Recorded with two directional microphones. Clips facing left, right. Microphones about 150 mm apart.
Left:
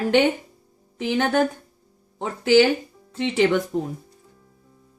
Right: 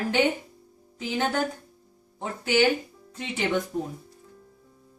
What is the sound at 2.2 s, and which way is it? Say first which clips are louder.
Speech: left 6 dB; 80° left.